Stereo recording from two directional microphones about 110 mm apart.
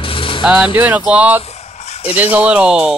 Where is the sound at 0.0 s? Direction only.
55° left (ahead or behind).